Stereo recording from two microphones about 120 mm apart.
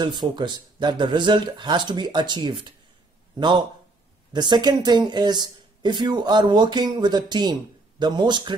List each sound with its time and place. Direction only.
0.0 s speech: 40° right (ahead or behind)